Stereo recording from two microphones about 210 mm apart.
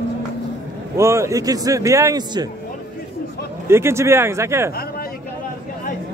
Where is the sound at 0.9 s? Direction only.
15° right (ahead or behind).